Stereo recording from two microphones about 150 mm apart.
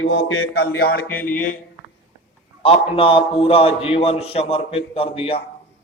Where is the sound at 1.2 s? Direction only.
65° left (ahead or behind).